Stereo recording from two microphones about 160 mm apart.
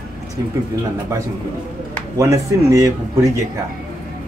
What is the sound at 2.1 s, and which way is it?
Speech, 20° right (ahead or behind).